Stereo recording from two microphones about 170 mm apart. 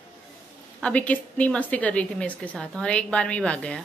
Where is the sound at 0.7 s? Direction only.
5° left (ahead or behind).